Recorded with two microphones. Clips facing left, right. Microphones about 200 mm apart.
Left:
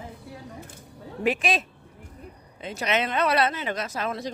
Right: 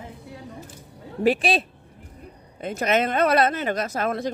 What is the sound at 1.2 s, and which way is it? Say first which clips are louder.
Speech: right 4 dB; 35° right (ahead or behind).